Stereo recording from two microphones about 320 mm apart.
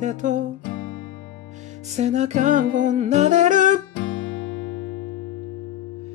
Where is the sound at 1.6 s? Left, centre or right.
Right.